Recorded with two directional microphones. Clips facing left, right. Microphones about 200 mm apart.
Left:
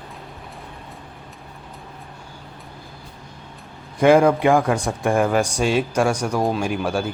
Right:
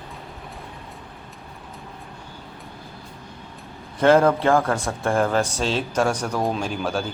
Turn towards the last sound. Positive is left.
turn(degrees=10)  # may be behind; listen again after turning